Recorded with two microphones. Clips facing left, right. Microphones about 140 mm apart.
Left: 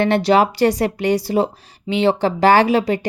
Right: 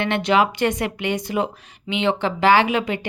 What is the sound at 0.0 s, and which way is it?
Speech, 35° left (ahead or behind).